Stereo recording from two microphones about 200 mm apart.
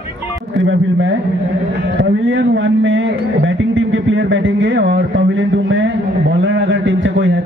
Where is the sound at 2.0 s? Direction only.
65° right (ahead or behind).